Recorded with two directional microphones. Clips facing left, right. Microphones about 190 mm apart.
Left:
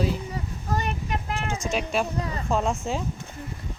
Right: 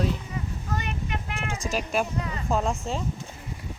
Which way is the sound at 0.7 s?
35° left (ahead or behind).